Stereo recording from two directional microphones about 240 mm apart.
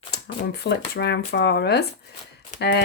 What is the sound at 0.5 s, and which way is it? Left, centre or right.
Speech, left.